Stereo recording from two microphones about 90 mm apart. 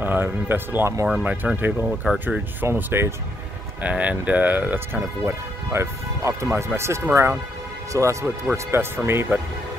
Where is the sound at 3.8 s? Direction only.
15° right (ahead or behind).